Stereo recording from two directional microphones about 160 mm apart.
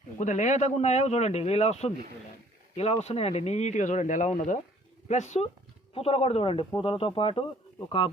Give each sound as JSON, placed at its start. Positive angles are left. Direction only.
{"t": 0.2, "sound": "speech", "side_deg": 50}
{"t": 5.9, "sound": "speech", "side_deg": 35}